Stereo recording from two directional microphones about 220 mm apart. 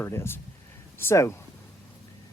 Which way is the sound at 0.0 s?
10° left (ahead or behind).